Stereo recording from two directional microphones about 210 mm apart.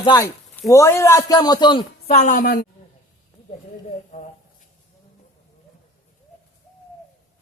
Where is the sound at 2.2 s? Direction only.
40° left (ahead or behind).